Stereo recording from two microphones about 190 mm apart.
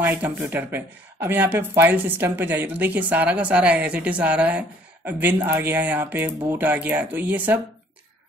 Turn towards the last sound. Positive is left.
turn(degrees=-10)  # may be behind; listen again after turning